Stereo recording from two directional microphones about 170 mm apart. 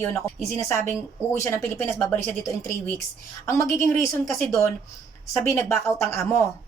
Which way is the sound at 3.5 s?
15° left (ahead or behind).